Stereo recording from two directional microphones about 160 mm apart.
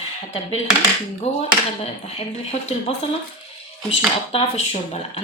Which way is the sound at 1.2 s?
40° left (ahead or behind).